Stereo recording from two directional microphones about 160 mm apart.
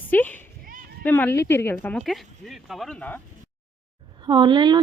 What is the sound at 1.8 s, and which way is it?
Speech, 5° left (ahead or behind).